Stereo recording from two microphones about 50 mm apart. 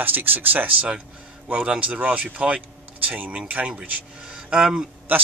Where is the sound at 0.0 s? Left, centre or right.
Right.